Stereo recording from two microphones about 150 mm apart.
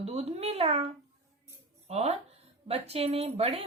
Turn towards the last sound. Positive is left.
turn(degrees=-45)  # may be behind; listen again after turning